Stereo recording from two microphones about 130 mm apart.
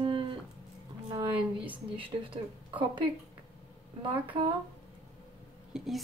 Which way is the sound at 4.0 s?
40° right (ahead or behind).